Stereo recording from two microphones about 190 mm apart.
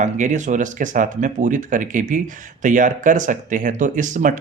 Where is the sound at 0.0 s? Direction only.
40° right (ahead or behind).